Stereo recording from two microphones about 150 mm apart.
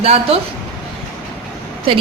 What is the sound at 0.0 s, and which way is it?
Speech, 45° right (ahead or behind).